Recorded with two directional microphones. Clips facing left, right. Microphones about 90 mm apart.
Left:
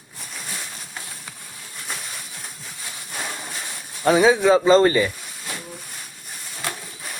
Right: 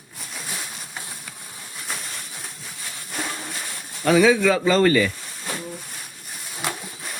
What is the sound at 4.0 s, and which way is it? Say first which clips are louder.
Speech: left 1 dB; 25° left (ahead or behind).